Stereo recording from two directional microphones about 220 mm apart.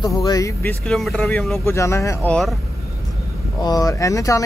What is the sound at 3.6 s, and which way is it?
Speech, 15° left (ahead or behind).